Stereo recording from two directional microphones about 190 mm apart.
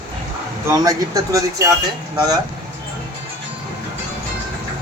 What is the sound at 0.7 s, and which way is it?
Speech, 20° right (ahead or behind).